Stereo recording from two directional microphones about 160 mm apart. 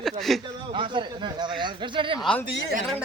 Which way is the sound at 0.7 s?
30° right (ahead or behind).